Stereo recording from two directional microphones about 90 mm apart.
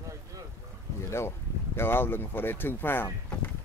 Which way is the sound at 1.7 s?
25° left (ahead or behind).